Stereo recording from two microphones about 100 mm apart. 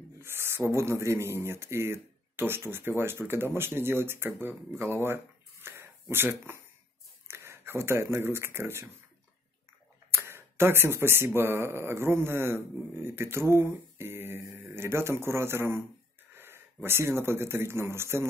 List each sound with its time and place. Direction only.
0.2 s speech: 25° right (ahead or behind)
10.1 s speech: 25° right (ahead or behind)